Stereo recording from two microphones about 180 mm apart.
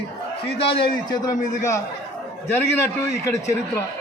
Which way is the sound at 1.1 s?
20° left (ahead or behind).